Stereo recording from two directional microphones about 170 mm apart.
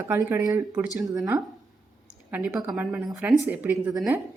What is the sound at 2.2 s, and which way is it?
Speech, 10° right (ahead or behind).